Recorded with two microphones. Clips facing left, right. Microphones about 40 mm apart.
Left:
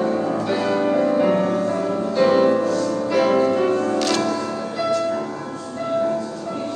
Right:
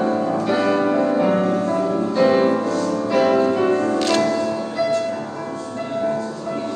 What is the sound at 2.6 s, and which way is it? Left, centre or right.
Music, right.